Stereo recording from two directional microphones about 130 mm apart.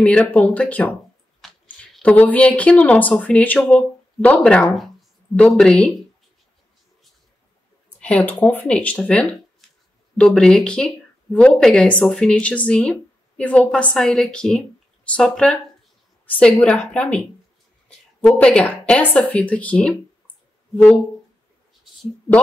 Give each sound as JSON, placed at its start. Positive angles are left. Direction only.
{"t": 0.0, "sound": "speech", "side_deg": 10}
{"t": 1.4, "sound": "chewing", "side_deg": 0}
{"t": 2.0, "sound": "a woman's voice", "side_deg": 10}
{"t": 8.0, "sound": "a woman's voice", "side_deg": 10}
{"t": 18.2, "sound": "speech", "side_deg": 10}